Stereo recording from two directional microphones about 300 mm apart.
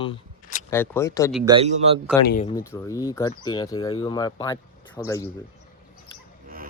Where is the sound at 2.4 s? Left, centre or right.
Centre.